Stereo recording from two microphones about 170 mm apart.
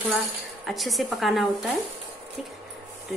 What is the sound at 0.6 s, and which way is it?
Speech, centre (ahead or behind).